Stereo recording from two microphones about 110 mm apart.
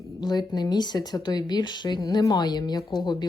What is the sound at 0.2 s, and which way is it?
Speech, 40° left (ahead or behind).